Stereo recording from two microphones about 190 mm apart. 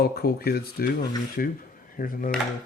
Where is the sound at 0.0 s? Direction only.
55° left (ahead or behind).